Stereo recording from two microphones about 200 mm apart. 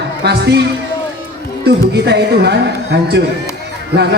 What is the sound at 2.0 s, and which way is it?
Speech, 55° right (ahead or behind).